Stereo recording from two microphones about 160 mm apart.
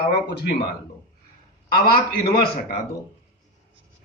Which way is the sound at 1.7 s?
70° left (ahead or behind).